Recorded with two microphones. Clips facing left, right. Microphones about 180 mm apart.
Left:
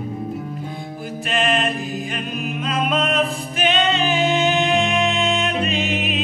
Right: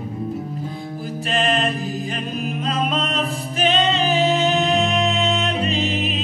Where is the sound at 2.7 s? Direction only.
35° right (ahead or behind).